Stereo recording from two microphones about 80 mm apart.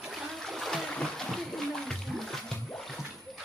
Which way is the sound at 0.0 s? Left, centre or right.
Centre.